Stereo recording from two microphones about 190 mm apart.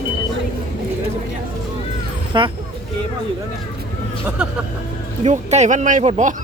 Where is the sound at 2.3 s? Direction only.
25° right (ahead or behind).